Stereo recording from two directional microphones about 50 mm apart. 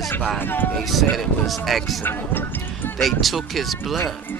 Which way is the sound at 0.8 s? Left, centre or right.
Centre.